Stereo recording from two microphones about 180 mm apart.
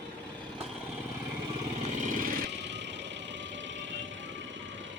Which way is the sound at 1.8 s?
40° right (ahead or behind).